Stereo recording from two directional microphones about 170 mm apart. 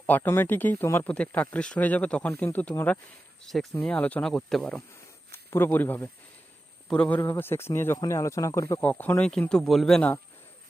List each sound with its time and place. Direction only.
0.0 s speech: 15° left (ahead or behind)